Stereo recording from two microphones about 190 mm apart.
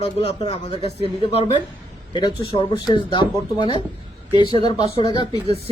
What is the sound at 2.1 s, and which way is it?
Speech, 25° left (ahead or behind).